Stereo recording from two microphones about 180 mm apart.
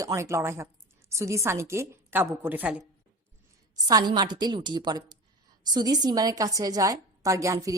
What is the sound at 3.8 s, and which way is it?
A woman's voice, 20° right (ahead or behind).